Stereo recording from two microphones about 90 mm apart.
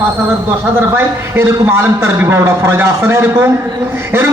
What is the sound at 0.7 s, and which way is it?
A man's voice, 25° right (ahead or behind).